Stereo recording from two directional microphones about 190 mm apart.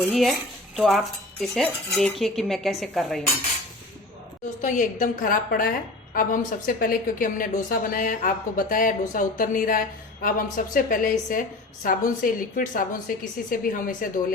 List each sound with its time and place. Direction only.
0.1 s cutlery: centre (ahead or behind)
4.6 s speech: 40° left (ahead or behind)